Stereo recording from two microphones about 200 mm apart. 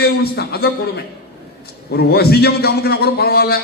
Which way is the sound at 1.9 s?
55° left (ahead or behind).